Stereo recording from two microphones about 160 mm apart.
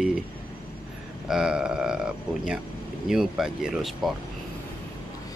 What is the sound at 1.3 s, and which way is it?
Speech, 5° right (ahead or behind).